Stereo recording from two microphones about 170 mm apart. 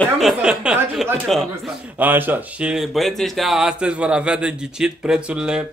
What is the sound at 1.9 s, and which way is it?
Speech, 10° right (ahead or behind).